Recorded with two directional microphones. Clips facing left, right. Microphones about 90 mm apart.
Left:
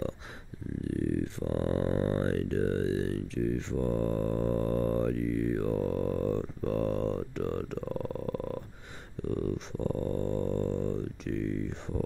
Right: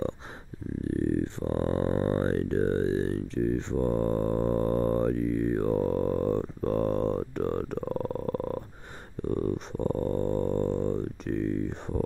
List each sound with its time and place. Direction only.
0.8 s grunt: 35° right (ahead or behind)
9.3 s dog: 40° right (ahead or behind)